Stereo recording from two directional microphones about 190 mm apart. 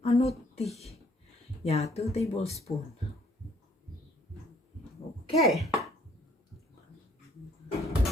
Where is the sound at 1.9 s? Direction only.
35° left (ahead or behind).